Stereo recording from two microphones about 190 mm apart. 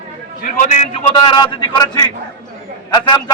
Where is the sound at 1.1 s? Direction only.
20° left (ahead or behind).